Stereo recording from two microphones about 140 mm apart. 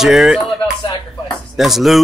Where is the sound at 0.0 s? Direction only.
Centre (ahead or behind).